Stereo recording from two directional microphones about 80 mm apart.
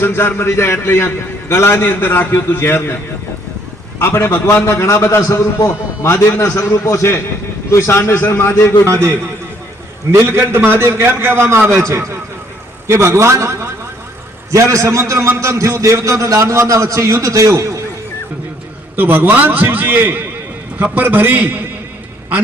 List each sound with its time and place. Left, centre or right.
0.0 s a man's voice: left
3.9 s a man's voice: left
10.2 s a man's voice: right
18.9 s a man's voice: right